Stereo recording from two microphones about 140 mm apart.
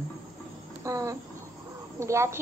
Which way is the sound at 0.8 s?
25° right (ahead or behind).